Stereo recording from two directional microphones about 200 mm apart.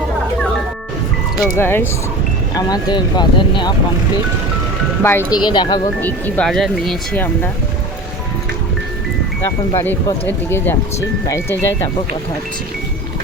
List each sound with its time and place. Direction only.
1.4 s speech: 10° left (ahead or behind)
5.0 s speech: 10° left (ahead or behind)
5.4 s speech: 20° left (ahead or behind)
6.0 s speech: 10° left (ahead or behind)
9.7 s speech: 10° left (ahead or behind)